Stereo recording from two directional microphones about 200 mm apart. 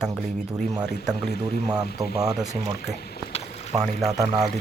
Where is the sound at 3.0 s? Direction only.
50° left (ahead or behind).